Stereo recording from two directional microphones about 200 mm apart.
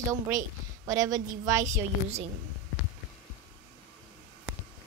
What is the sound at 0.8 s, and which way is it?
Speech, 15° right (ahead or behind).